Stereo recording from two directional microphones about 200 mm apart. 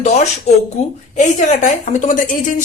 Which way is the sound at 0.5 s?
35° left (ahead or behind).